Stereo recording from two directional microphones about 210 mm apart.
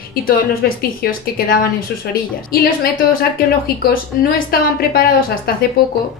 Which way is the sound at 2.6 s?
45° left (ahead or behind).